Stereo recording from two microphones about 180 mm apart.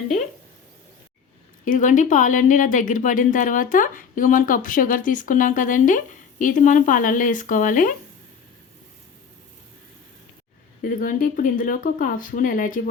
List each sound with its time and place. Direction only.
1.6 s speech: 45° left (ahead or behind)
10.8 s speech: 50° left (ahead or behind)